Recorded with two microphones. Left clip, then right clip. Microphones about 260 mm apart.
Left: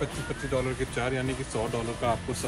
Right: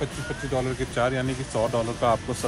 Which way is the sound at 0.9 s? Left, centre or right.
Centre.